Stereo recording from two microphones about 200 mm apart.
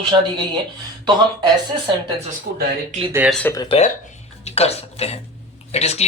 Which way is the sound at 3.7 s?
35° left (ahead or behind).